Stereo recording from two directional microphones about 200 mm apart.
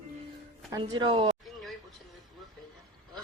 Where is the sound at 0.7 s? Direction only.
20° right (ahead or behind).